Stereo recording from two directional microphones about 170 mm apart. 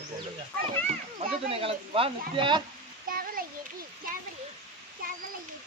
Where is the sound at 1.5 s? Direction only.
35° right (ahead or behind).